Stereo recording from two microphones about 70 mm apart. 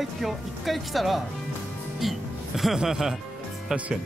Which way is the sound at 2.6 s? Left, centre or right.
Centre.